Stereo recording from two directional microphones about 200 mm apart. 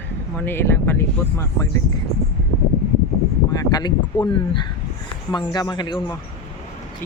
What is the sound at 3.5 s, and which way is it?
Speech, 20° left (ahead or behind).